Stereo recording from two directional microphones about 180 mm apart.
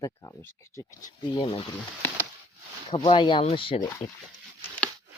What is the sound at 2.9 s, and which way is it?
Speech, 30° left (ahead or behind).